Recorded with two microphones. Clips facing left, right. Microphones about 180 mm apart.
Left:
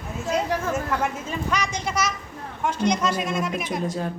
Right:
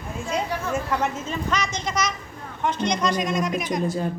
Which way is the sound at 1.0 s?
10° left (ahead or behind).